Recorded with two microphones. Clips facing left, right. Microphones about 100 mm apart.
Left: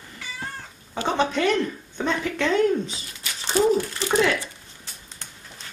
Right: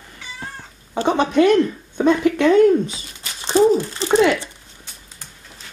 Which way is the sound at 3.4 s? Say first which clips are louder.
Right 5 dB; 25° right (ahead or behind).